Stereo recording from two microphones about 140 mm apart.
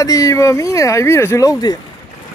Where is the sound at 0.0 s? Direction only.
25° left (ahead or behind).